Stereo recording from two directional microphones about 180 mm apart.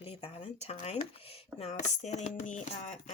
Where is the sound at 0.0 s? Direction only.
30° left (ahead or behind).